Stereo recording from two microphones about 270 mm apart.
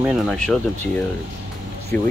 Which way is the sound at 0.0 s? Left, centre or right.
Centre.